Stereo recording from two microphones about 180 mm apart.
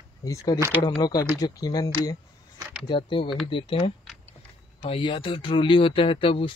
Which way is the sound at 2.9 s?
30° left (ahead or behind).